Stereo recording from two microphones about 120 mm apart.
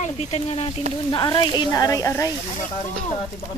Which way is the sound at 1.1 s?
35° left (ahead or behind).